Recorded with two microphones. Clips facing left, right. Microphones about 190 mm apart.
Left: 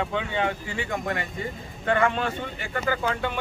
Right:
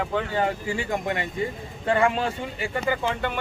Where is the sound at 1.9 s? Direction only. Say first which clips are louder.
Right 1 dB; 30° right (ahead or behind).